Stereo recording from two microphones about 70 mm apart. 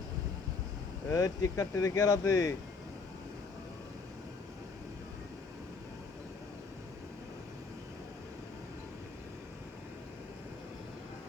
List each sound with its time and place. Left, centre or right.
1.1 s speech: left